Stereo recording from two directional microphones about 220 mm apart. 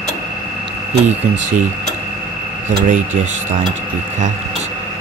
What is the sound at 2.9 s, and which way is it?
Speech, 35° right (ahead or behind).